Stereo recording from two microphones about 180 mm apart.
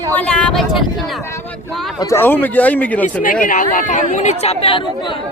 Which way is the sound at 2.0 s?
15° left (ahead or behind).